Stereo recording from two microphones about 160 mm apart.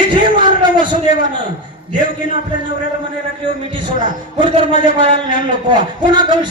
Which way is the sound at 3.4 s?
30° right (ahead or behind).